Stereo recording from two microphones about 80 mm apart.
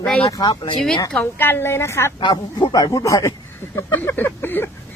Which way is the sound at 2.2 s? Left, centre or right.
Left.